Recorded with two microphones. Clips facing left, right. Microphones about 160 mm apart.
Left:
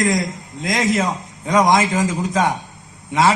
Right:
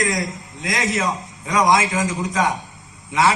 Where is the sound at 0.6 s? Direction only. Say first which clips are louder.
Left 4 dB; 30° left (ahead or behind).